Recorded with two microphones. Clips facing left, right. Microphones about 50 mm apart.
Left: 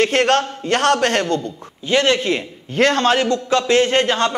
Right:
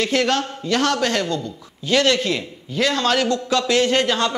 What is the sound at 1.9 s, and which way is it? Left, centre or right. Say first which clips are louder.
Speech: left 2 dB; left.